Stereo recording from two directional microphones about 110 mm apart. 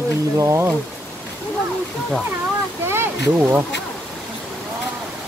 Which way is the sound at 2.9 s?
20° right (ahead or behind).